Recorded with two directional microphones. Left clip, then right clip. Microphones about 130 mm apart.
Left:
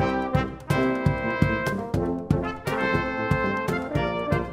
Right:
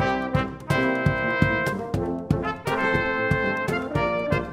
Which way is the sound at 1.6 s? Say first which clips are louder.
Even; 10° left (ahead or behind).